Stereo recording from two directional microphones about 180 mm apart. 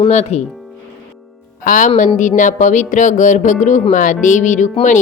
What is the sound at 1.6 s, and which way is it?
Speech, 50° left (ahead or behind).